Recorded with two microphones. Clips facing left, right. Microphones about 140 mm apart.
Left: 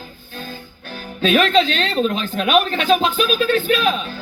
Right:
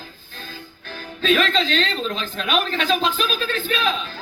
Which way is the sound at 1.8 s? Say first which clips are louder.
Left 6 dB; 45° left (ahead or behind).